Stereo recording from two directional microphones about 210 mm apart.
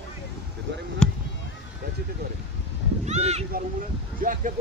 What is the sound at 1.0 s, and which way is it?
Speech, 5° left (ahead or behind).